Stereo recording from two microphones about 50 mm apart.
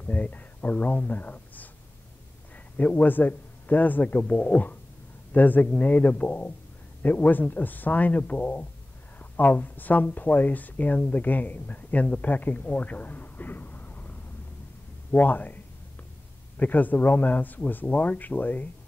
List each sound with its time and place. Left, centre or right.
0.0 s a man's voice: left